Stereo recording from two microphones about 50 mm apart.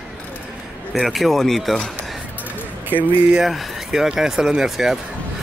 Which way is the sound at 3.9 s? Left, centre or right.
Centre.